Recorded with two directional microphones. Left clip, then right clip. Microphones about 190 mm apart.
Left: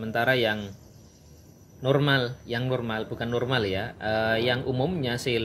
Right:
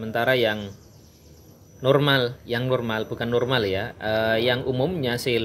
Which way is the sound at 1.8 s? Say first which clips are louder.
Right 4 dB; 15° right (ahead or behind).